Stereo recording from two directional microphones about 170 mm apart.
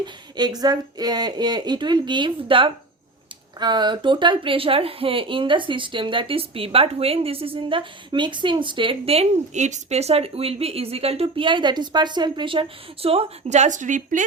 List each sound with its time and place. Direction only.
0.0 s a woman's voice: 25° right (ahead or behind); by 14.3 s 50° right (ahead or behind)